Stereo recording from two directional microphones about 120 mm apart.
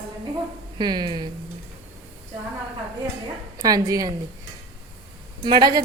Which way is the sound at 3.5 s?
30° right (ahead or behind).